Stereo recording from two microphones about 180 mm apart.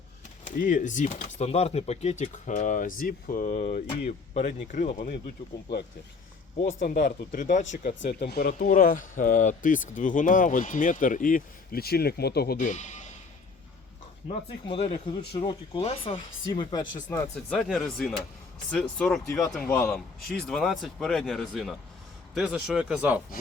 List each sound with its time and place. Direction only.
0.4 s speech: 45° left (ahead or behind)
6.6 s speech: 45° left (ahead or behind)
8.2 s speech: 60° left (ahead or behind)
12.5 s speech: 40° left (ahead or behind)
14.6 s speech: 30° left (ahead or behind)
17.3 s speech: 5° left (ahead or behind)
19.3 s a man's voice: 20° left (ahead or behind); by 23.2 s 5° right (ahead or behind)